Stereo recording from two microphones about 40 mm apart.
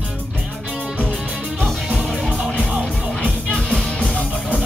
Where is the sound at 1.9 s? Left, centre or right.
Centre.